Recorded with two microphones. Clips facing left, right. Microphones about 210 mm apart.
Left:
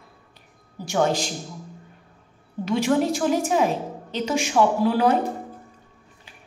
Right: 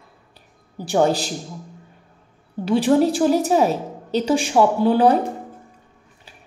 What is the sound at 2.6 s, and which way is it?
A woman's voice, 35° right (ahead or behind).